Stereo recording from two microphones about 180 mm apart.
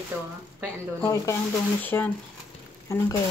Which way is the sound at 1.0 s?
15° left (ahead or behind).